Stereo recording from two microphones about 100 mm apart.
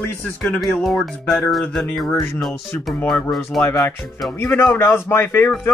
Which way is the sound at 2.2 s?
Centre (ahead or behind).